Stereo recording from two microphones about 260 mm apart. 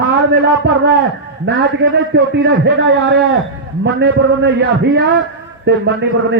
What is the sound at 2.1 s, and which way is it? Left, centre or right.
A man's voice, right.